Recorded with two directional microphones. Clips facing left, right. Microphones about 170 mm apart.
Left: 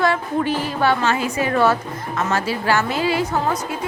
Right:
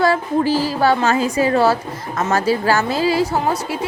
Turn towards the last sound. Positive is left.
turn(degrees=-35)  # may be behind; listen again after turning